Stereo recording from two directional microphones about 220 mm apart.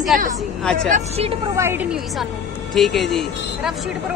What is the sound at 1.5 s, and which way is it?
A woman's voice, 10° right (ahead or behind).